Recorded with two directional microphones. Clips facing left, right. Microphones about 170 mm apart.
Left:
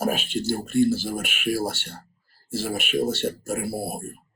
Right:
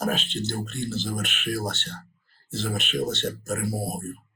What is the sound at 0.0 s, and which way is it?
Speech, 10° left (ahead or behind).